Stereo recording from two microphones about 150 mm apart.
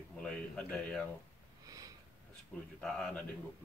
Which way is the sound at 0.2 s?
5° left (ahead or behind).